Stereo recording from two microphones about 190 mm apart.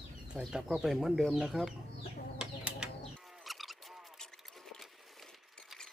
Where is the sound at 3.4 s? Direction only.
Centre (ahead or behind).